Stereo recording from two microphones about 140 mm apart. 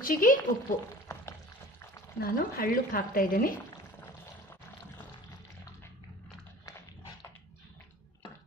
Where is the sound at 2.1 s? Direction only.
90° left.